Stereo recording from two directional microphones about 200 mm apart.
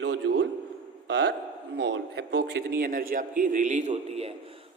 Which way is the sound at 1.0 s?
60° right (ahead or behind).